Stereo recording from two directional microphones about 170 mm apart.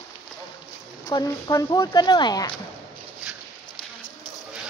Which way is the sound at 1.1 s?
20° left (ahead or behind).